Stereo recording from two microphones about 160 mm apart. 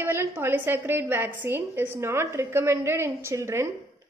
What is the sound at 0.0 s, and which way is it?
A woman's voice, 15° right (ahead or behind).